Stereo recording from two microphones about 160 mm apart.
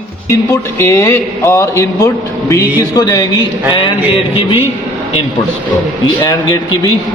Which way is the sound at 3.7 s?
35° left (ahead or behind).